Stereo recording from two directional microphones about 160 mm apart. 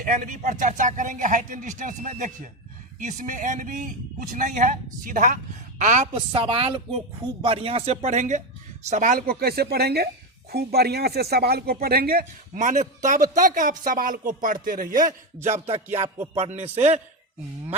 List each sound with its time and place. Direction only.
0.0 s a man's voice: 55° right (ahead or behind)
6.1 s speech: 30° right (ahead or behind); by 12.2 s 75° right (ahead or behind)
12.5 s a man's voice: 50° right (ahead or behind)
15.4 s speech: 40° right (ahead or behind)